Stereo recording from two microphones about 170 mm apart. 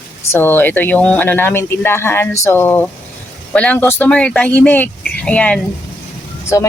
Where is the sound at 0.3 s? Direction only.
10° left (ahead or behind).